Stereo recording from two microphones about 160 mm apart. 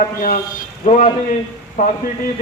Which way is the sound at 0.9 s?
45° left (ahead or behind).